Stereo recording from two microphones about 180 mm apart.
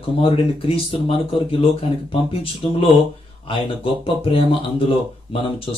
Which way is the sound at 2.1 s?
30° left (ahead or behind).